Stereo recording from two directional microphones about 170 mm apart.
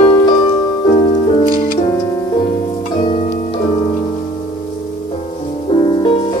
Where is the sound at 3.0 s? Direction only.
40° left (ahead or behind).